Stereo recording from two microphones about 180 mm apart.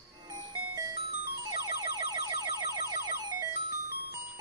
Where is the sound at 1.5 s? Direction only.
20° right (ahead or behind).